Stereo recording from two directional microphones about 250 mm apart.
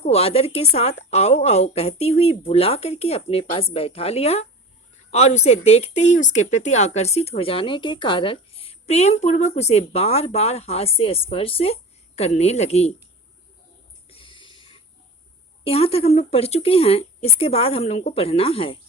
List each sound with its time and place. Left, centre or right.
0.0 s speech: left
14.1 s a sound: left
15.6 s speech: left